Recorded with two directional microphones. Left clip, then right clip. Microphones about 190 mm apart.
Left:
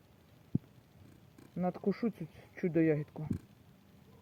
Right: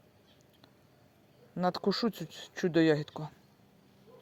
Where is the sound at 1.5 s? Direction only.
20° right (ahead or behind).